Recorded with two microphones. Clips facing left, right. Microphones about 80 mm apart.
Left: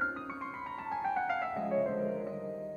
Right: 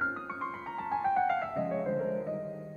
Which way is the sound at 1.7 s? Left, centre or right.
Centre.